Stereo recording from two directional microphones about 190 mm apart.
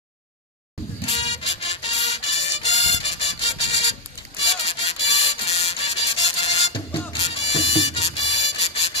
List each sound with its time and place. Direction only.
1.0 s music: 30° left (ahead or behind)